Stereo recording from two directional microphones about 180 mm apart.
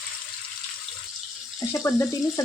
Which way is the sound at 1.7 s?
15° left (ahead or behind).